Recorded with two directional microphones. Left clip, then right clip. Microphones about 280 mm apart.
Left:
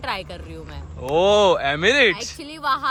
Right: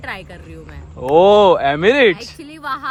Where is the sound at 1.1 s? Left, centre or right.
Centre.